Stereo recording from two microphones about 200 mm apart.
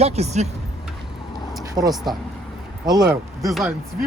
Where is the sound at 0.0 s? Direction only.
35° right (ahead or behind).